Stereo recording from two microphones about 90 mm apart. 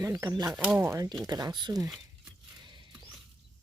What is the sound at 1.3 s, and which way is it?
Speech, 45° right (ahead or behind).